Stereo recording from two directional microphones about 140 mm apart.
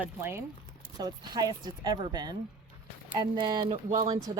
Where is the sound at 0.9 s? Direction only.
30° right (ahead or behind).